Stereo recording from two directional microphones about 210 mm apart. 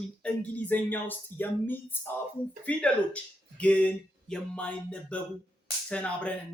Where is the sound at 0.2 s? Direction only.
5° left (ahead or behind).